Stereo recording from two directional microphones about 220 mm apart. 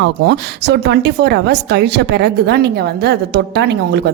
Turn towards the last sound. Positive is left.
turn(degrees=-50)  # may be behind; listen again after turning